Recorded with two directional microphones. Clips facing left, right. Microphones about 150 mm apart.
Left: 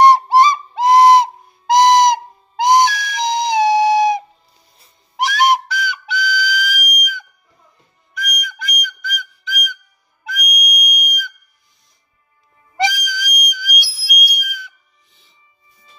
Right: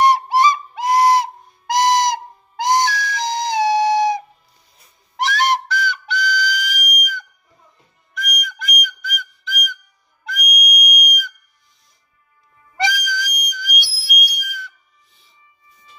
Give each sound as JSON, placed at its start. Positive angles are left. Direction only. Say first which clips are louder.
{"t": 0.0, "sound": "whistle", "louder": "left 4 dB", "side_deg": 30}
{"t": 12.7, "sound": "whistle", "louder": "left 2 dB", "side_deg": 20}
{"t": 15.7, "sound": "music", "louder": "right 2 dB", "side_deg": 30}